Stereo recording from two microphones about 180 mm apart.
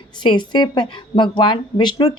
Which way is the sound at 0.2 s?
25° left (ahead or behind).